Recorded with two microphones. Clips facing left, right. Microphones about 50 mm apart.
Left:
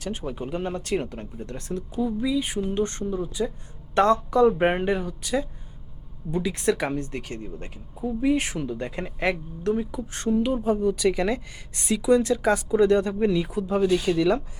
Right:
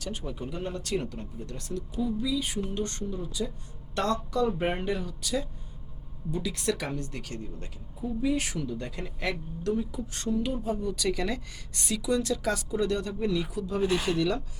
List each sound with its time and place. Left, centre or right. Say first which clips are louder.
0.0 s speech: left 5 dB; left
13.8 s speech: left 4 dB; right
14.2 s speech: left 6 dB; left